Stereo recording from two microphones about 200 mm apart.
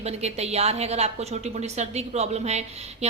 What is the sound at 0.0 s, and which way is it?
A woman's voice, 30° right (ahead or behind).